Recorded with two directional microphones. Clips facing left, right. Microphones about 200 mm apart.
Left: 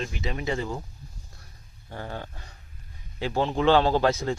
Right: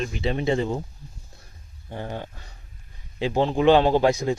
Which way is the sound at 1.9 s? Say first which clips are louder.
Right 3 dB; 20° right (ahead or behind).